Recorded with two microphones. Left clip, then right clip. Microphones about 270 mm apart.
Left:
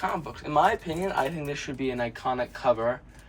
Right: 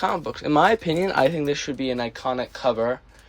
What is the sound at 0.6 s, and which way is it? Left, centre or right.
Speech, right.